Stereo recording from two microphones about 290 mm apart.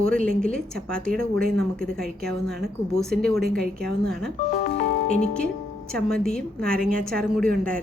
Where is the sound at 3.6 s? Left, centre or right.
Right.